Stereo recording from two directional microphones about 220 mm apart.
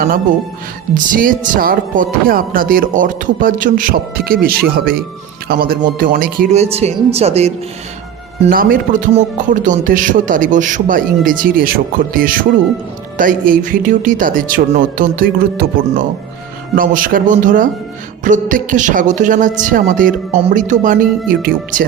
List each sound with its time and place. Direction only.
0.9 s speech: 40° right (ahead or behind)
6.5 s speech: 30° right (ahead or behind)
8.4 s speech: 40° right (ahead or behind)